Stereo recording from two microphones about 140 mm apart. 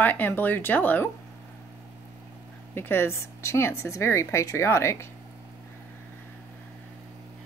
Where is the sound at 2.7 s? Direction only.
15° left (ahead or behind).